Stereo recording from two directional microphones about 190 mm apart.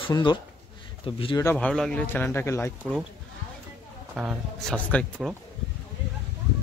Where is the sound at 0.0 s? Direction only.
25° left (ahead or behind).